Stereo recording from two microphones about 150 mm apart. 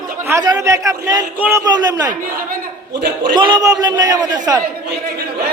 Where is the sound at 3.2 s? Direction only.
30° right (ahead or behind).